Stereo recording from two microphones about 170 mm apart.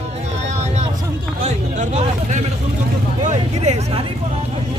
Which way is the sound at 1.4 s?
40° right (ahead or behind).